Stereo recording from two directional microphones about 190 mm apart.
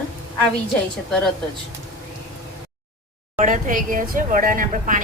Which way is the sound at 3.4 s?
45° right (ahead or behind).